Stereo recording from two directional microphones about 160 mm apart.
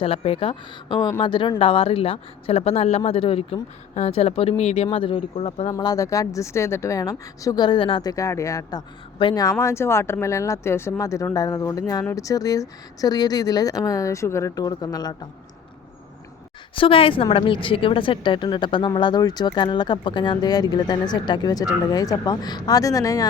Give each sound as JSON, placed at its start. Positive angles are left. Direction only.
{"t": 0.0, "sound": "speech", "side_deg": 35}
{"t": 5.7, "sound": "speech", "side_deg": 20}
{"t": 16.7, "sound": "speech", "side_deg": 35}